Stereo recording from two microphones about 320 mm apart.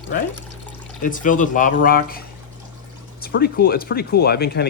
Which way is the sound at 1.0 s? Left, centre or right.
Left.